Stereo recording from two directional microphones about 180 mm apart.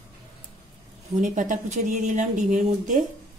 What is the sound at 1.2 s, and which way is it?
Speech, 45° right (ahead or behind).